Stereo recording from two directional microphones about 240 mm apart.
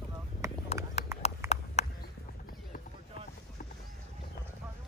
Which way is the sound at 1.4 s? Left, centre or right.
Centre.